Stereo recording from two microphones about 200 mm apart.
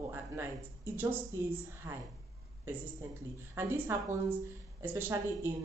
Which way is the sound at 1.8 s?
15° right (ahead or behind).